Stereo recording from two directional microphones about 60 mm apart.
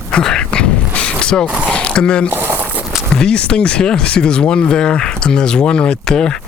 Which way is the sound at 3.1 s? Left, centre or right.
Centre.